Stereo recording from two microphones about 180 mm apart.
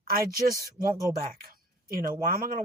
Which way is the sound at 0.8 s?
55° right (ahead or behind).